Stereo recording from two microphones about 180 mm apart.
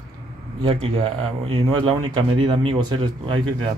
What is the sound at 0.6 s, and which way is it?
Speech, 30° right (ahead or behind).